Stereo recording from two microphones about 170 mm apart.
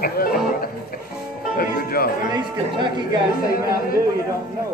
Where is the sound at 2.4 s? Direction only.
25° right (ahead or behind).